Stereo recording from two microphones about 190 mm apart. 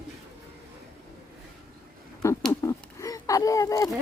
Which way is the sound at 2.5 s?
15° left (ahead or behind).